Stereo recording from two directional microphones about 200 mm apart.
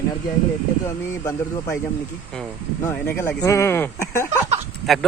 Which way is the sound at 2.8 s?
10° left (ahead or behind).